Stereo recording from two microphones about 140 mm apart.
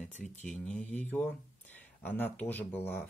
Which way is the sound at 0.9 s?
10° left (ahead or behind).